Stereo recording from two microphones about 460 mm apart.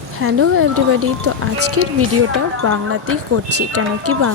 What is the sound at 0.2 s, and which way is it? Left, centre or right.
Speech, right.